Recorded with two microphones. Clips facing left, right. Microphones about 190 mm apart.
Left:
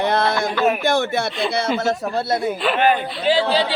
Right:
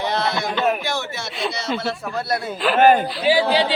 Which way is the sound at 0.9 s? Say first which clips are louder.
Left 8 dB; 55° left (ahead or behind).